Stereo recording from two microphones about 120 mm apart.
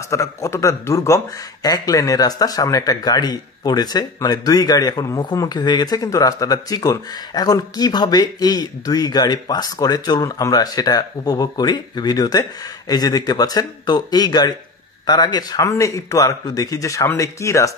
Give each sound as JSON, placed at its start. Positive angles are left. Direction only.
{"t": 0.1, "sound": "a man's voice", "side_deg": 25}